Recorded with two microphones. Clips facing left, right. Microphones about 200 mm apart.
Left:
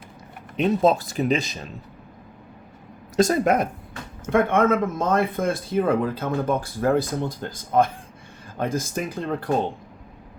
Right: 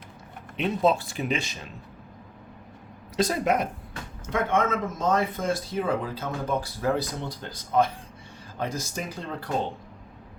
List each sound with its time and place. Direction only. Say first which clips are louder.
0.5 s speech: left 4 dB; 40° left (ahead or behind)
3.2 s speech: left 5 dB; 50° left (ahead or behind)